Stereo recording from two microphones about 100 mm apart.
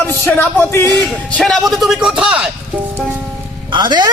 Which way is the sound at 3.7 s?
45° right (ahead or behind).